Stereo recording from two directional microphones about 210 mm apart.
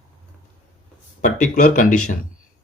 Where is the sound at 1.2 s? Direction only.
35° left (ahead or behind).